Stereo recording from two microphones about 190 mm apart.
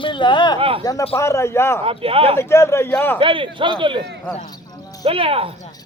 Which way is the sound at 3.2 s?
25° right (ahead or behind).